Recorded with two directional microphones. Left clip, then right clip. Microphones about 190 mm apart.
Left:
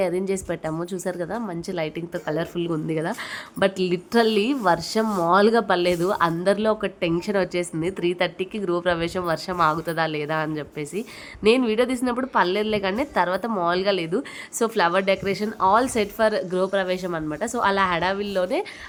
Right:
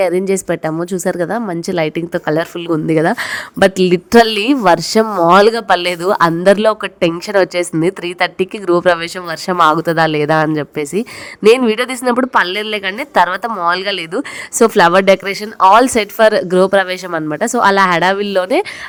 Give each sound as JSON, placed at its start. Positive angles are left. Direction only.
{"t": 0.0, "sound": "speech", "side_deg": -30}
{"t": 5.0, "sound": "speech", "side_deg": -25}
{"t": 5.3, "sound": "speech", "side_deg": -40}